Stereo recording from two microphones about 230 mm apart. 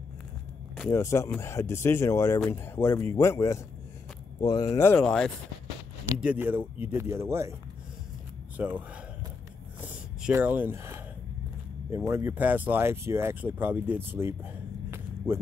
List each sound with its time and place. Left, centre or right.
0.7 s speech: centre
6.2 s speech: centre
8.5 s speech: centre
9.8 s a sound: centre
11.9 s speech: centre